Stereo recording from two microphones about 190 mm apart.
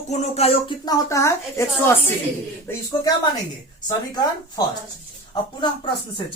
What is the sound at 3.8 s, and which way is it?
Speech, 20° left (ahead or behind).